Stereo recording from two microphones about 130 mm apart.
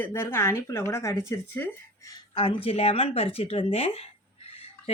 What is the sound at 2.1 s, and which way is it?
Speech, 40° left (ahead or behind).